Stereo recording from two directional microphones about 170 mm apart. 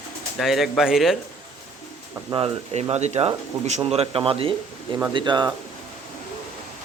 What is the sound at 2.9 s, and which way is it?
A man's voice, 40° right (ahead or behind).